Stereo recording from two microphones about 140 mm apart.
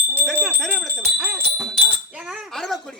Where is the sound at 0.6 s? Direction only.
5° left (ahead or behind).